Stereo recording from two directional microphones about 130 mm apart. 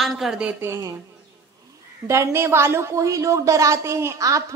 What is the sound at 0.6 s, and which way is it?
Speech, 20° right (ahead or behind).